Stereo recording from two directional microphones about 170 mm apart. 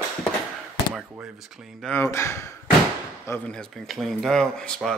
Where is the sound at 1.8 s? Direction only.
15° left (ahead or behind).